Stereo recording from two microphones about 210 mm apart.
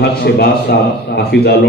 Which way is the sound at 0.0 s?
50° left (ahead or behind).